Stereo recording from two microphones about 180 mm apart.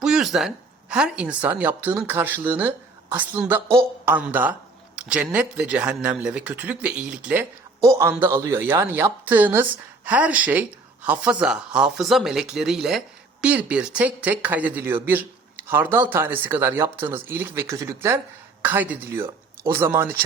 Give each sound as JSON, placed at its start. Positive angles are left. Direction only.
{"t": 0.0, "sound": "speech", "side_deg": -5}
{"t": 7.8, "sound": "a man's voice", "side_deg": -15}